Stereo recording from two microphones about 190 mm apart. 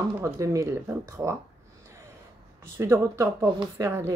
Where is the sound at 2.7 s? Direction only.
15° right (ahead or behind).